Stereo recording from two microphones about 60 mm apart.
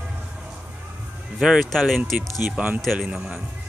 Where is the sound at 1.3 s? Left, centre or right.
Centre.